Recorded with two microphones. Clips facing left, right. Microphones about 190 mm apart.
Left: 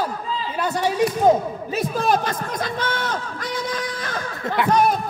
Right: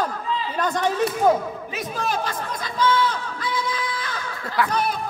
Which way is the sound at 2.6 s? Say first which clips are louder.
Right 8 dB; 55° left (ahead or behind).